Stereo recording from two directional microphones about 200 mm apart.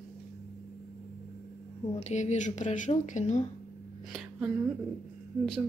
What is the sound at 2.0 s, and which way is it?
Speech, 35° left (ahead or behind).